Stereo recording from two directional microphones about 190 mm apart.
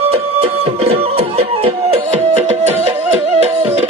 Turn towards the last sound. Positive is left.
turn(degrees=-35)  # may be behind; listen again after turning